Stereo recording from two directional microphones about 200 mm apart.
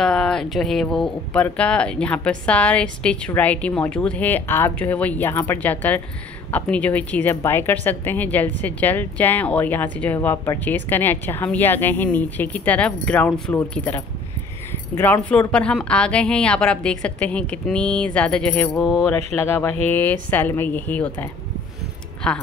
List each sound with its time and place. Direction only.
0.0 s speech: 5° left (ahead or behind)